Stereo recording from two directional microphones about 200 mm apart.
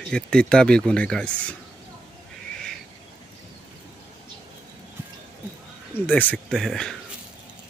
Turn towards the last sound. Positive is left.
turn(degrees=0)  # may be behind; listen again after turning